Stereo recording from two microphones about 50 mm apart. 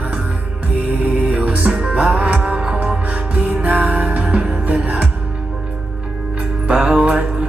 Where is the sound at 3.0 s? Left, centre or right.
Right.